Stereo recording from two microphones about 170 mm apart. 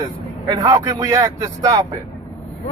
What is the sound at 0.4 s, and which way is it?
Speech, 25° right (ahead or behind).